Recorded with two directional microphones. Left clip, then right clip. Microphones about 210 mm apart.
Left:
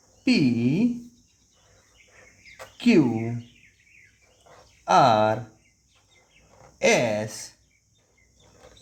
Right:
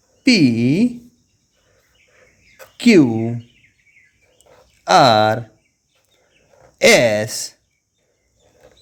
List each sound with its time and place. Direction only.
0.3 s speech: 50° right (ahead or behind)
2.7 s speech: 45° right (ahead or behind)
4.9 s speech: 40° right (ahead or behind)
6.7 s speech: 45° right (ahead or behind)